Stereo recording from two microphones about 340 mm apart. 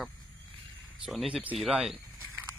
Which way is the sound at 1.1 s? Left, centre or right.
Centre.